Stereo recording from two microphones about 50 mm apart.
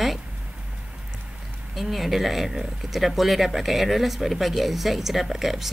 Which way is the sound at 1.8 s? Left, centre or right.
Centre.